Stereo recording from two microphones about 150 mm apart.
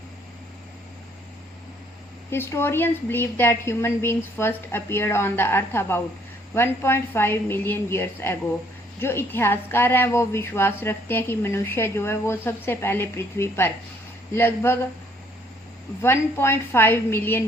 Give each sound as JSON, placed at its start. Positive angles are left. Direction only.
{"t": 2.3, "sound": "a woman's voice", "side_deg": 15}
{"t": 16.0, "sound": "a woman's voice", "side_deg": 15}